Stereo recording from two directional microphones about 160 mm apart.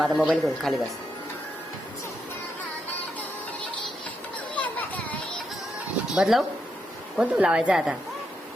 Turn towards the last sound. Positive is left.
turn(degrees=-5)  # may be behind; listen again after turning